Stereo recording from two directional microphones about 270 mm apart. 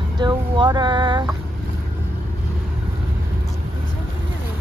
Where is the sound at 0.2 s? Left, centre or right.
Centre.